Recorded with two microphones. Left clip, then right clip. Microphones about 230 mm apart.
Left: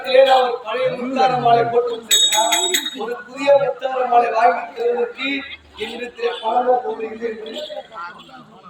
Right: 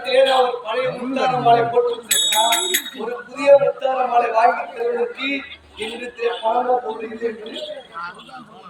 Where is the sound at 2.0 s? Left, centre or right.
Centre.